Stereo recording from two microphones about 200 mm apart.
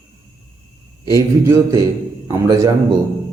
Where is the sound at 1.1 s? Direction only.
15° right (ahead or behind).